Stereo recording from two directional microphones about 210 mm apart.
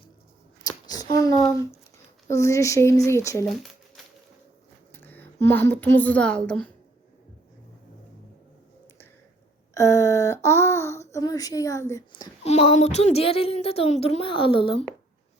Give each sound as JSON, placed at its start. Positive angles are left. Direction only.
{"t": 0.7, "sound": "a sound", "side_deg": 20}
{"t": 1.1, "sound": "speech", "side_deg": 15}
{"t": 3.4, "sound": "a sound", "side_deg": 0}
{"t": 4.9, "sound": "a woman's voice", "side_deg": 10}
{"t": 9.7, "sound": "speech", "side_deg": 15}
{"t": 12.5, "sound": "speech", "side_deg": 30}